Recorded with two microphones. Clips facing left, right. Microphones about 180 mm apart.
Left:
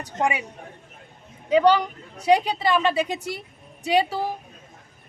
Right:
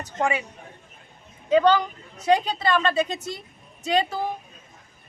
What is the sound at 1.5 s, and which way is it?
A man's voice, 10° left (ahead or behind).